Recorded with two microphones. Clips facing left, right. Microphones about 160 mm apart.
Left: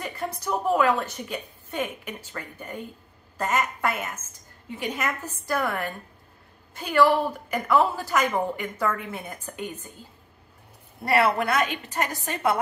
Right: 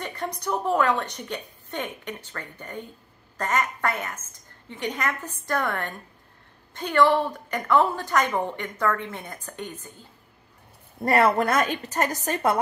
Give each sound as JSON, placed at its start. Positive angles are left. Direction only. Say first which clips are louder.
{"t": 0.0, "sound": "a woman's voice", "louder": "even", "side_deg": 5}
{"t": 11.1, "sound": "a woman's voice", "louder": "right 2 dB", "side_deg": -45}